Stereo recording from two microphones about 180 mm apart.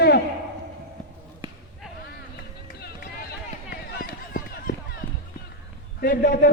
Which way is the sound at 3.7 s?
55° left (ahead or behind).